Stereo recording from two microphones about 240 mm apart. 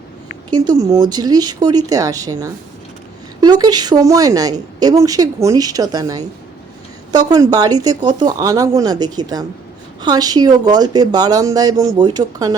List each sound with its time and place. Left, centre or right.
0.5 s a woman's voice: centre